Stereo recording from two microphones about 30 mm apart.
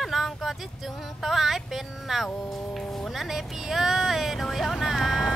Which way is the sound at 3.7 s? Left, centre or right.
Centre.